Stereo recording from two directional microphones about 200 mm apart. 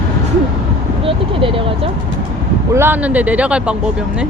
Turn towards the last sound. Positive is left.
turn(degrees=-5)  # may be behind; listen again after turning